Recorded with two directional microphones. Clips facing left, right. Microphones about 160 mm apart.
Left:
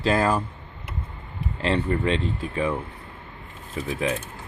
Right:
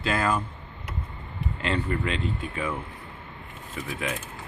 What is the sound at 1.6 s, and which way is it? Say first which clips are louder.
Speech: left 4 dB; 35° left (ahead or behind).